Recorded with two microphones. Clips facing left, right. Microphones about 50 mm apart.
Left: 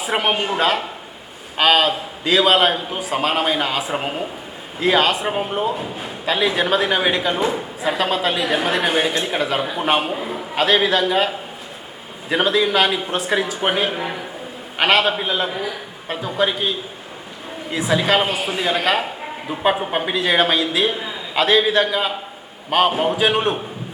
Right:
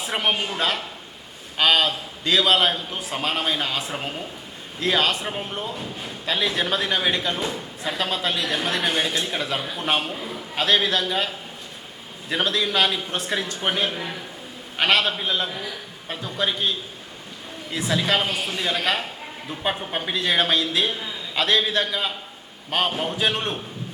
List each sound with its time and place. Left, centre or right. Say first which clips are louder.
0.0 s a woman's voice: left 4 dB; centre
3.9 s speech: left 7 dB; left
4.8 s a woman's voice: left 5 dB; centre
10.6 s a woman's voice: left 5 dB; centre
14.8 s a woman's voice: left 4 dB; centre
19.2 s a sound: left 7 dB; centre
19.8 s a woman's voice: left 5 dB; centre